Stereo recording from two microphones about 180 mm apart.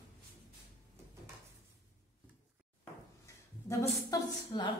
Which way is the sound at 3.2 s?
15° left (ahead or behind).